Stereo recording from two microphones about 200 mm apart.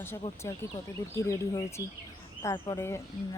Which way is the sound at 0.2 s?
15° left (ahead or behind).